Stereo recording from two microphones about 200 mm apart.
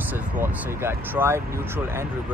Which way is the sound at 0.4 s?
10° right (ahead or behind).